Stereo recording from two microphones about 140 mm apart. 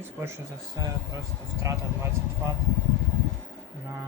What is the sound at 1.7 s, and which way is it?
Speech, 20° right (ahead or behind).